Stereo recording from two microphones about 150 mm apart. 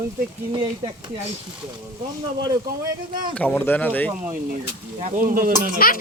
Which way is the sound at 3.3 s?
10° left (ahead or behind).